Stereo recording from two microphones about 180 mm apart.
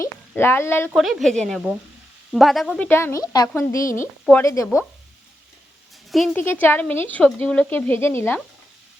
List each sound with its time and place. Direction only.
0.0 s speech: 15° left (ahead or behind)
0.9 s a woman's voice: centre (ahead or behind); by 3.8 s 15° left (ahead or behind)
3.8 s speech: 45° left (ahead or behind)
4.3 s a woman's voice: 15° left (ahead or behind)
6.1 s speech: centre (ahead or behind)
6.3 s a woman's voice: 10° left (ahead or behind)